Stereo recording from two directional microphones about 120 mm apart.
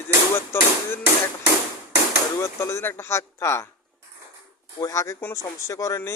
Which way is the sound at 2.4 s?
25° left (ahead or behind).